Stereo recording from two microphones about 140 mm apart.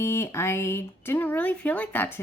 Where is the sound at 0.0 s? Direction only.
20° left (ahead or behind).